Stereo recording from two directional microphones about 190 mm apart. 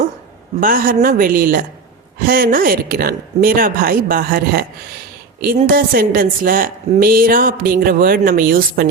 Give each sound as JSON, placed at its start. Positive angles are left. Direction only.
{"t": 0.6, "sound": "a woman's voice", "side_deg": -50}